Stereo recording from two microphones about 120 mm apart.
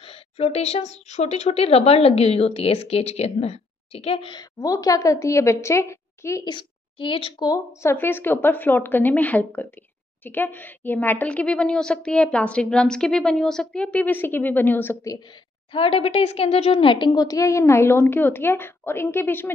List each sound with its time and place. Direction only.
0.0 s a woman's voice: 55° left (ahead or behind)
4.6 s a woman's voice: 30° left (ahead or behind)
6.4 s a woman's voice: 45° left (ahead or behind)
7.3 s a woman's voice: 30° left (ahead or behind)
7.9 s a woman's voice: 15° left (ahead or behind)
15.7 s a woman's voice: 50° left (ahead or behind); by 19.5 s 15° left (ahead or behind)